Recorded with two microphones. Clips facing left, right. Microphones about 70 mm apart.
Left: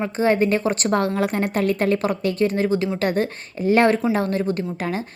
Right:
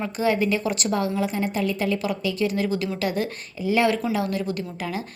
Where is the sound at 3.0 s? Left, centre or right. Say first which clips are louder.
Left 4 dB; left.